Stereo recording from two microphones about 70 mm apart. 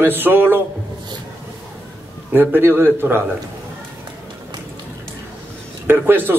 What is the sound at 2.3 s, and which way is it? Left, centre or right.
Speech, right.